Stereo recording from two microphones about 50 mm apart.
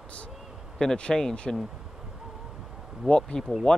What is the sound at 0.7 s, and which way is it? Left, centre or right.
Speech, centre.